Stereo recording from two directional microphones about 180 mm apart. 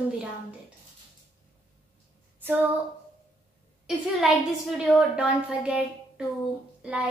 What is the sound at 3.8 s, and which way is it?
Speech, centre (ahead or behind).